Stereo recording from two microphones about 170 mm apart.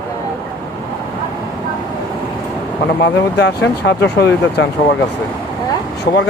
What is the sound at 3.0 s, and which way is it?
Speech, 90° left.